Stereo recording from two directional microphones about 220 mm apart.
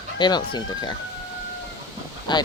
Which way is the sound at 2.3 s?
20° left (ahead or behind).